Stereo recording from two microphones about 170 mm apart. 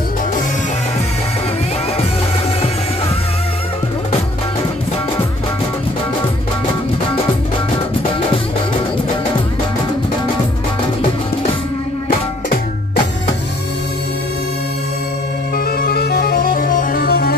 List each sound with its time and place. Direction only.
15.5 s music: 60° left (ahead or behind)